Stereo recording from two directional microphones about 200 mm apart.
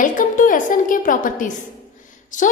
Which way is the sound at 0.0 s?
40° left (ahead or behind).